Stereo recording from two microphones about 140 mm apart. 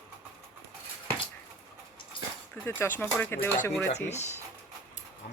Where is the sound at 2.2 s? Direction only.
35° left (ahead or behind).